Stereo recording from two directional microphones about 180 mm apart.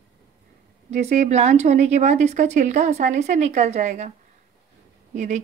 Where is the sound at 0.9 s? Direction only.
40° right (ahead or behind).